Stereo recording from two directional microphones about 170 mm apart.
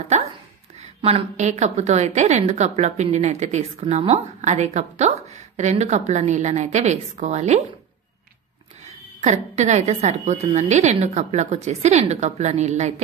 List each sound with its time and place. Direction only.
0.7 s a woman's voice: 40° right (ahead or behind)
8.8 s a woman's voice: 40° right (ahead or behind)